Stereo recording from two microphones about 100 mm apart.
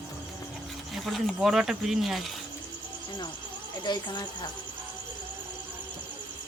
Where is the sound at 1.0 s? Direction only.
Centre (ahead or behind).